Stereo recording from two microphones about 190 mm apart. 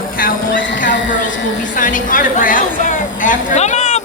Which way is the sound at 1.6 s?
45° left (ahead or behind).